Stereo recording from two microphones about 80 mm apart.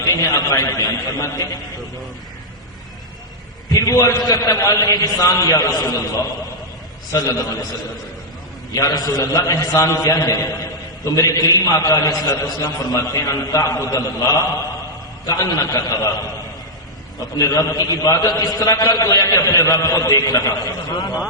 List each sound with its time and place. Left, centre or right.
0.0 s a man's voice: left
3.7 s a man's voice: left
7.1 s a man's voice: left
8.7 s a man's voice: left
9.2 s a man's voice: left
18.7 s a man's voice: left
18.9 s a man's voice: left